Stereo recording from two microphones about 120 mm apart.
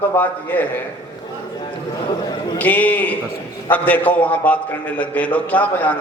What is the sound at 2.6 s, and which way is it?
A man's voice, 15° left (ahead or behind).